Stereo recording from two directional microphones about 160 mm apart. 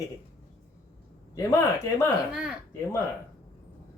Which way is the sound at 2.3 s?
5° right (ahead or behind).